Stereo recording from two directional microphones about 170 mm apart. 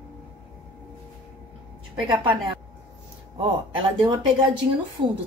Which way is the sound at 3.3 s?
30° right (ahead or behind).